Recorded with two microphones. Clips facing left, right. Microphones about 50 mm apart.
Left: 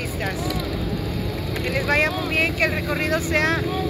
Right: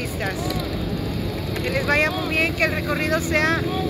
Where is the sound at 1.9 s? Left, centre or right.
Centre.